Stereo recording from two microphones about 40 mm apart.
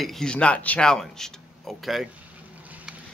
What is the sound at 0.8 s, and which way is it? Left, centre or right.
Speech, centre.